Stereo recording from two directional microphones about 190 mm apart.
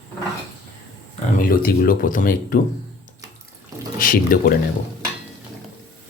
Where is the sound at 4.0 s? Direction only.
45° left (ahead or behind).